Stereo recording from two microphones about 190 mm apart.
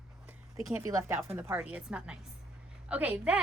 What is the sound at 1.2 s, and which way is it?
A woman's voice, 10° right (ahead or behind).